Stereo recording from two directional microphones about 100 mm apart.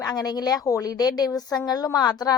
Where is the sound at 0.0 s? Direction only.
40° left (ahead or behind).